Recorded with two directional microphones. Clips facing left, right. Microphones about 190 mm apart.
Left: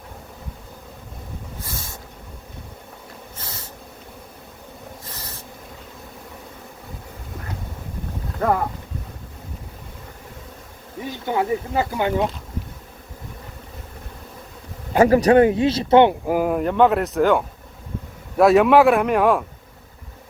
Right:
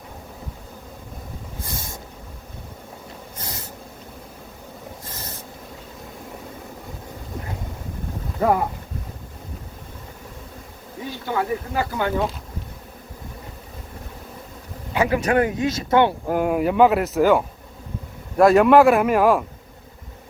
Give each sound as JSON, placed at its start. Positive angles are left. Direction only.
{"t": 8.4, "sound": "speech", "side_deg": -10}
{"t": 11.3, "sound": "speech", "side_deg": 20}
{"t": 14.9, "sound": "speech", "side_deg": 40}
{"t": 16.2, "sound": "speech", "side_deg": 5}